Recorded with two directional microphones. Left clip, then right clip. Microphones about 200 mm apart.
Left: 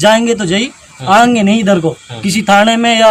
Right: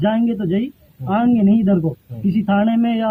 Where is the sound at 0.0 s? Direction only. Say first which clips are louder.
Left 11 dB; 5° left (ahead or behind).